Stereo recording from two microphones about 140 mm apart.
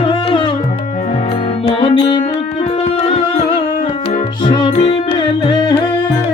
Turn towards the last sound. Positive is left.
turn(degrees=30)  # may be behind; listen again after turning